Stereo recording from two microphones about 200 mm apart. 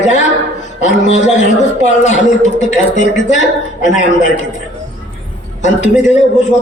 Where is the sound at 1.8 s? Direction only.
35° left (ahead or behind).